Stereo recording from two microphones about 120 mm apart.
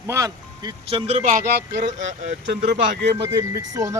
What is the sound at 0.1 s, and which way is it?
Speech, 30° right (ahead or behind).